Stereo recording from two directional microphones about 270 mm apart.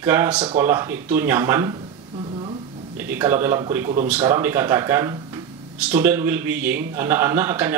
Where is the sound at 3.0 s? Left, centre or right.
Centre.